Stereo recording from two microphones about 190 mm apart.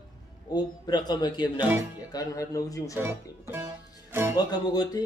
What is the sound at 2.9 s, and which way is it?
Speech, 10° right (ahead or behind).